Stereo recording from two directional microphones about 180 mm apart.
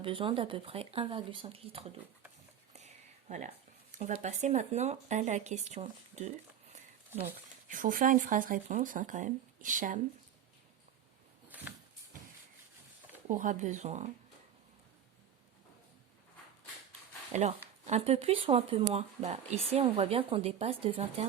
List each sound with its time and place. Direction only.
0.0 s speech: 30° right (ahead or behind)
2.7 s a sound: 40° right (ahead or behind)
3.9 s speech: 40° right (ahead or behind)
7.1 s speech: 10° right (ahead or behind)
7.7 s speech: 50° right (ahead or behind)
11.4 s a sound: 10° right (ahead or behind)
13.2 s speech: 45° right (ahead or behind)
17.3 s speech: 40° right (ahead or behind)